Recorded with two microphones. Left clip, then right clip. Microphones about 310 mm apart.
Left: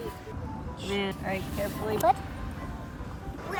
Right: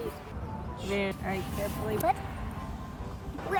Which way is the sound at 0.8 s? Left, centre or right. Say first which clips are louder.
Left 1 dB; centre.